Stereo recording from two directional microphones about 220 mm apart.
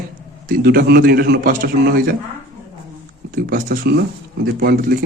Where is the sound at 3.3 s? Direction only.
45° right (ahead or behind).